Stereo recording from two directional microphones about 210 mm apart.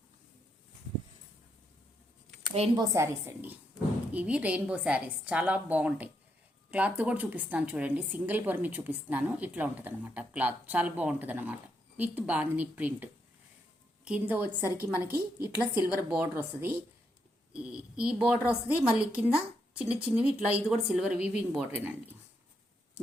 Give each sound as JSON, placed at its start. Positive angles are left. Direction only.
{"t": 2.5, "sound": "a woman's voice", "side_deg": -30}
{"t": 2.8, "sound": "a woman's voice", "side_deg": -15}